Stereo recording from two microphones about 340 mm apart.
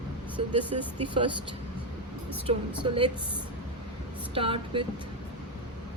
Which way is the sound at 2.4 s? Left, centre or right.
Centre.